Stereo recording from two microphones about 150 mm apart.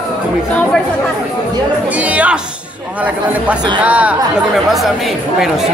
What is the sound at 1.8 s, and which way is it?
Speech, 10° right (ahead or behind).